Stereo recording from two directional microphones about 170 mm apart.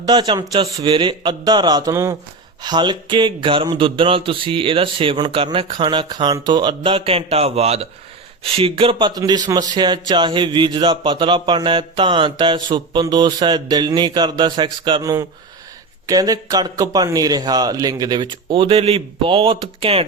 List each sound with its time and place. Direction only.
0.0 s speech: 25° right (ahead or behind)